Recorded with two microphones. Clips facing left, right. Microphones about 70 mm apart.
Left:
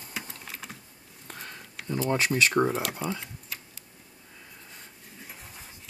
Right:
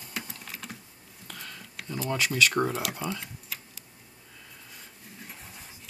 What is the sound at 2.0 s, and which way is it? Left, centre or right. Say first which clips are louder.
Speech: left 1 dB; left.